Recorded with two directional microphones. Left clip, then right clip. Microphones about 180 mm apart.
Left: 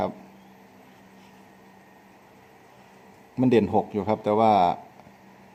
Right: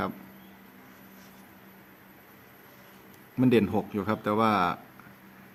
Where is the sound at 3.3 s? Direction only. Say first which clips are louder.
Left 4 dB; 10° left (ahead or behind).